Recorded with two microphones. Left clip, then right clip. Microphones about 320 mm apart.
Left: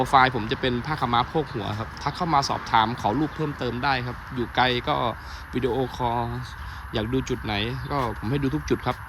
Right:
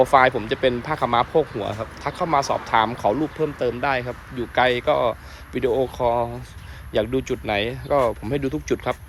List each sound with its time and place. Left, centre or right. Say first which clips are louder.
0.0 s speech: right 3 dB; centre